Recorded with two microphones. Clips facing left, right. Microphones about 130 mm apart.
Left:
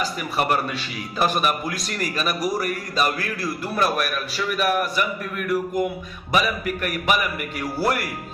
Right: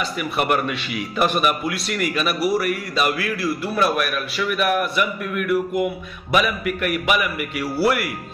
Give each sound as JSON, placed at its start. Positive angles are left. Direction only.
{"t": 0.2, "sound": "a man's voice", "side_deg": 35}